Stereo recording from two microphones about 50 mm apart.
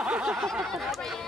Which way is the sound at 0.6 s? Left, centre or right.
Centre.